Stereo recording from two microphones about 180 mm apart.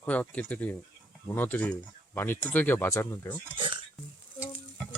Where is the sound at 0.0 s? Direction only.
10° left (ahead or behind).